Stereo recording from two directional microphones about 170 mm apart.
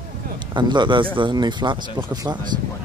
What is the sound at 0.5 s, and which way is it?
Speech, 25° right (ahead or behind).